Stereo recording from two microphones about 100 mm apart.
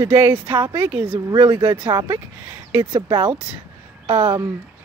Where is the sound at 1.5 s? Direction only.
50° right (ahead or behind).